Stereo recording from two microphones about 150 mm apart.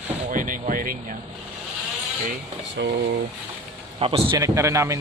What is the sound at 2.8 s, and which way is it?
Speech, 90° right.